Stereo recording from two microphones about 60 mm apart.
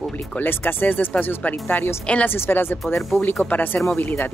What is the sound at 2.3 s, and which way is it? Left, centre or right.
Speech, left.